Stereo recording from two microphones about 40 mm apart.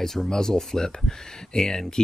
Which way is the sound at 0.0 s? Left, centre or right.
Centre.